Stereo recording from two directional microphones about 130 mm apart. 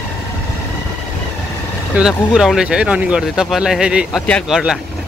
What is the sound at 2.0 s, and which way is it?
Speech, 5° right (ahead or behind).